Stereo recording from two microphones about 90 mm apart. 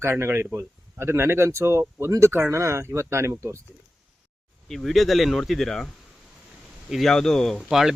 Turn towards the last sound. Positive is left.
turn(degrees=-5)  # may be behind; listen again after turning